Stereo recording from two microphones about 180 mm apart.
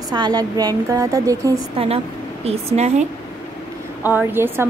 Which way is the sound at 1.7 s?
35° right (ahead or behind).